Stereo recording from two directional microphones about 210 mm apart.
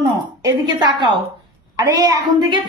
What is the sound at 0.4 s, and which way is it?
A woman's voice, 20° right (ahead or behind).